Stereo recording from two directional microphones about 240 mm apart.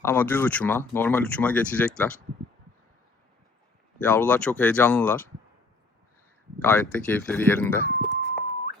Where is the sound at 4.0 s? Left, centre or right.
Centre.